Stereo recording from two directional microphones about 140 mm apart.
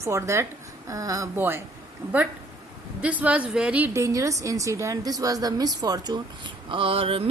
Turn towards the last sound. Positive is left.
turn(degrees=-40)  # may be behind; listen again after turning